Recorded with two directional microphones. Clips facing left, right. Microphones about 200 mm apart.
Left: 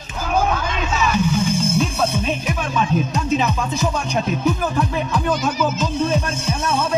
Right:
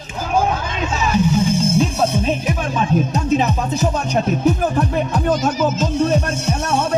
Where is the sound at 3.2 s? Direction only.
40° right (ahead or behind).